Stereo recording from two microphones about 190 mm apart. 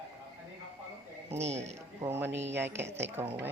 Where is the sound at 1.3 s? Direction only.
35° right (ahead or behind).